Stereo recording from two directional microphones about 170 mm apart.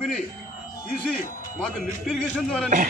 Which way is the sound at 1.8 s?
5° left (ahead or behind).